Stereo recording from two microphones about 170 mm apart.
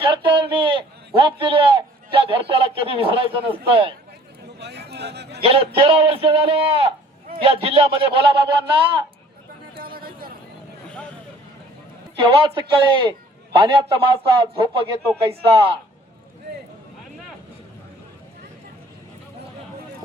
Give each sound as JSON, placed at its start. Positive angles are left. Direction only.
{"t": 0.0, "sound": "a man's voice", "side_deg": -30}
{"t": 4.6, "sound": "a sound", "side_deg": -75}
{"t": 5.4, "sound": "a man's voice", "side_deg": -35}
{"t": 9.7, "sound": "a sound", "side_deg": -60}
{"t": 10.8, "sound": "vehicle", "side_deg": 5}
{"t": 12.2, "sound": "a man's voice", "side_deg": -30}